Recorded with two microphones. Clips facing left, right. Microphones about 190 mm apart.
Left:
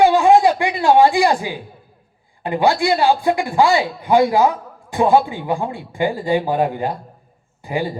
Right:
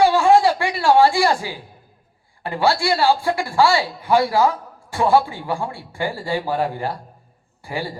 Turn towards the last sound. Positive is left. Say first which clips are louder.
# left 5 dB
turn(degrees=20)  # may be behind; listen again after turning